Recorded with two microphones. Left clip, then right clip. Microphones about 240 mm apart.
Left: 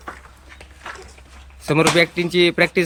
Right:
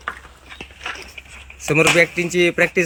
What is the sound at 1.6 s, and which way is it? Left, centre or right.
Speech, centre.